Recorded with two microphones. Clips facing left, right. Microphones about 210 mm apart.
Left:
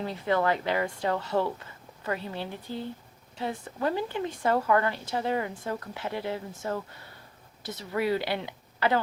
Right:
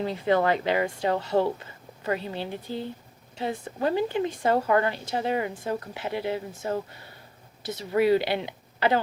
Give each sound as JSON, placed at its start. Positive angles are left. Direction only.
{"t": 0.0, "sound": "a woman's voice", "side_deg": -25}